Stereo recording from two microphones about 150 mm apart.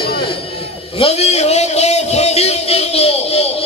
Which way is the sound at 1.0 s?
45° left (ahead or behind).